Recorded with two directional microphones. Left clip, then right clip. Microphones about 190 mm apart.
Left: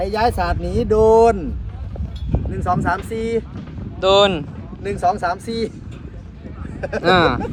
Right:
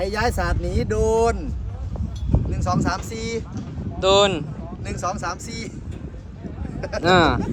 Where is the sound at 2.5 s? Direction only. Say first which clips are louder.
Left 5 dB; 50° left (ahead or behind).